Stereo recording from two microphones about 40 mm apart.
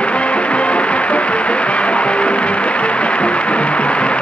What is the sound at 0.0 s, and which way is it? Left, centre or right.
Music, left.